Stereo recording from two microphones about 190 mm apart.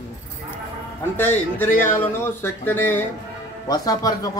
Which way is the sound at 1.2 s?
10° left (ahead or behind).